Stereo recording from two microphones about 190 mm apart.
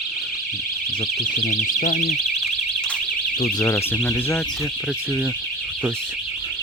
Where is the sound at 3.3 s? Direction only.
45° left (ahead or behind).